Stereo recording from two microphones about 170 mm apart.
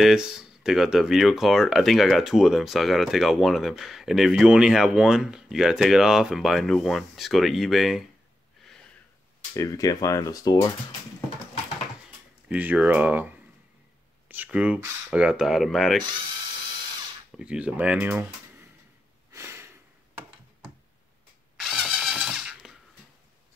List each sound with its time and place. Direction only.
0.0 s speech: 5° right (ahead or behind)
9.5 s speech: 20° left (ahead or behind)
12.4 s speech: 10° right (ahead or behind)
17.3 s speech: 5° right (ahead or behind)
19.3 s a sound: 15° right (ahead or behind)
21.5 s a sound: centre (ahead or behind)